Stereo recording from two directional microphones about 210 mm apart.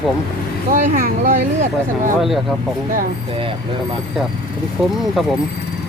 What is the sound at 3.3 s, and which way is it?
Speech, 25° right (ahead or behind).